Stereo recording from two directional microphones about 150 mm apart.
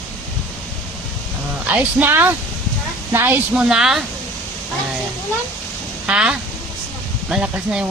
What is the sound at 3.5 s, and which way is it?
Speech, 5° right (ahead or behind).